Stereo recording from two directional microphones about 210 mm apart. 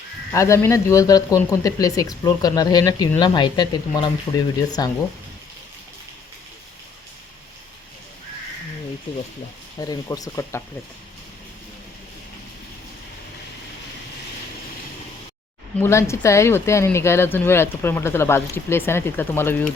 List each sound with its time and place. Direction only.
0.3 s speech: 15° left (ahead or behind)
9.1 s a sound: 25° left (ahead or behind)
9.8 s speech: 15° left (ahead or behind)
15.8 s speech: 15° left (ahead or behind)